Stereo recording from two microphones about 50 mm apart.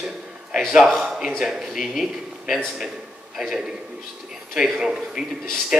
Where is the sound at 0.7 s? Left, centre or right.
Centre.